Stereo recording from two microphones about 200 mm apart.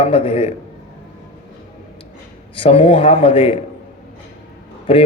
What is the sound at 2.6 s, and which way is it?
Speech, 25° left (ahead or behind).